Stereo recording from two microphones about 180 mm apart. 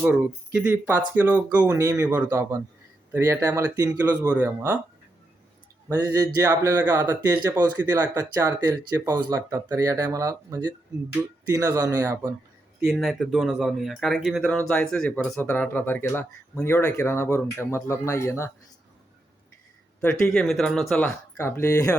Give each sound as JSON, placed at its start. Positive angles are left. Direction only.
{"t": 0.0, "sound": "speech", "side_deg": -10}
{"t": 5.9, "sound": "speech", "side_deg": -20}
{"t": 12.8, "sound": "speech", "side_deg": 0}
{"t": 20.0, "sound": "speech", "side_deg": 5}
{"t": 21.3, "sound": "speech", "side_deg": 15}